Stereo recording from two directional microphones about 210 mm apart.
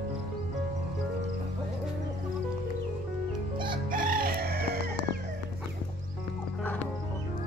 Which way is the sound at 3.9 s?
45° right (ahead or behind).